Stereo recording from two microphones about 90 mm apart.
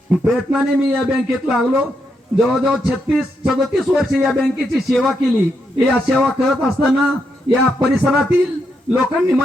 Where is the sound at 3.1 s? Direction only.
10° right (ahead or behind).